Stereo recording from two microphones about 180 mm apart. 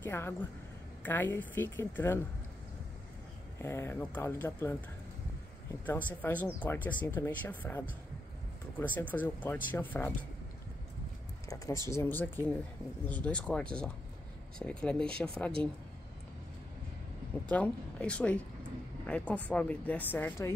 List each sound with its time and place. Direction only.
0.0 s a woman's voice: 10° left (ahead or behind)
3.6 s speech: 15° left (ahead or behind)
11.4 s speech: 20° left (ahead or behind)
17.5 s speech: 5° left (ahead or behind)